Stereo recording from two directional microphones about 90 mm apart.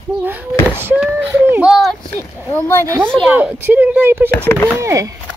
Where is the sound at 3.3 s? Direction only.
15° right (ahead or behind).